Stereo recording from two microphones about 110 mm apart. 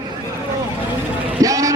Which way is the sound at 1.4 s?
30° right (ahead or behind).